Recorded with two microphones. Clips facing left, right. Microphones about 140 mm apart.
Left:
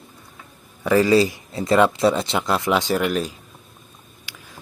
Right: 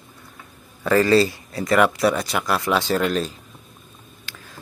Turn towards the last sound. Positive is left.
turn(degrees=15)  # may be behind; listen again after turning